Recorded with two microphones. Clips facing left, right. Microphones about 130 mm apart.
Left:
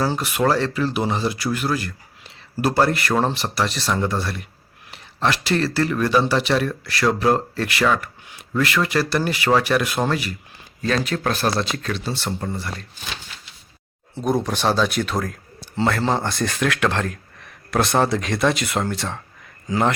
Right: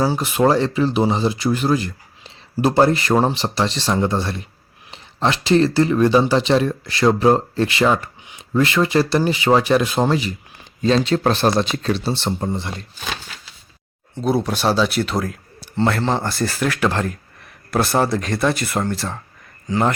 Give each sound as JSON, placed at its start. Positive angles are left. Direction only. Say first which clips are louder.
{"t": 0.0, "sound": "speech", "louder": "right 4 dB", "side_deg": -15}
{"t": 14.3, "sound": "speech", "louder": "right 2 dB", "side_deg": -10}